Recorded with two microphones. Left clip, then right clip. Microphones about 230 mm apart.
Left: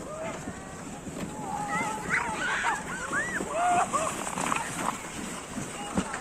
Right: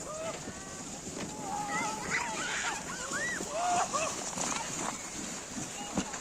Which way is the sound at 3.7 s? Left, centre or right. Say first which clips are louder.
Left 4 dB; left.